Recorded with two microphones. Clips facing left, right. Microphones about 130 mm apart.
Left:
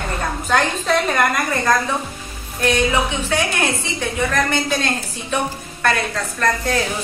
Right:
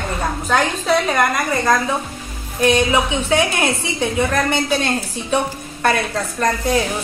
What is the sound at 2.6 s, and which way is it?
A woman's voice, 15° right (ahead or behind).